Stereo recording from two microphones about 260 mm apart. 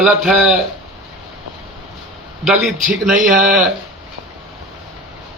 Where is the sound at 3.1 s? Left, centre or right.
Centre.